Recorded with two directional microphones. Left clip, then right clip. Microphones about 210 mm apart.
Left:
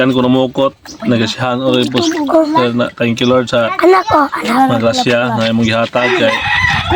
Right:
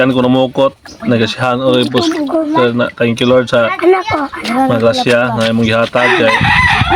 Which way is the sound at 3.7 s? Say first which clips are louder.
Left 3 dB; 50° left (ahead or behind).